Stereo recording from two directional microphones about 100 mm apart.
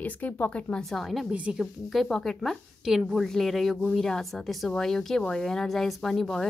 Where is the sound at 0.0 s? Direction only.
15° left (ahead or behind).